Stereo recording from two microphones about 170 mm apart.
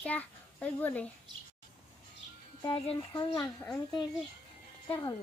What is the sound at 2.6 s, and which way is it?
Speech, 30° left (ahead or behind).